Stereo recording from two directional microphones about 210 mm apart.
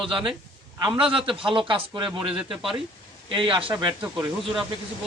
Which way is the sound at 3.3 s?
25° right (ahead or behind).